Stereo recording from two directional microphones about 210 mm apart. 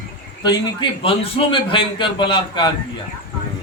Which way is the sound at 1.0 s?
25° left (ahead or behind).